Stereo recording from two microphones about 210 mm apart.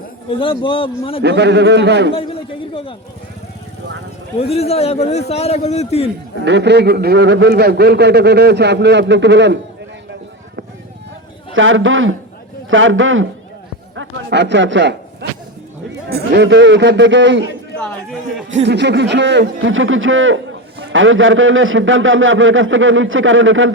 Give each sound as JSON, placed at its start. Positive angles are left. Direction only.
{"t": 0.3, "sound": "a man's voice", "side_deg": 25}
{"t": 1.2, "sound": "a man's voice", "side_deg": -55}
{"t": 2.1, "sound": "a sound", "side_deg": 25}
{"t": 4.4, "sound": "a man's voice", "side_deg": 30}
{"t": 6.4, "sound": "a man's voice", "side_deg": -55}
{"t": 11.5, "sound": "a man's voice", "side_deg": -65}
{"t": 17.7, "sound": "a man's voice", "side_deg": 5}
{"t": 18.6, "sound": "a man's voice", "side_deg": -55}